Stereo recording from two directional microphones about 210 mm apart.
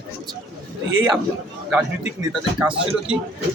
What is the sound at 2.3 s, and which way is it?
Speech, 5° right (ahead or behind).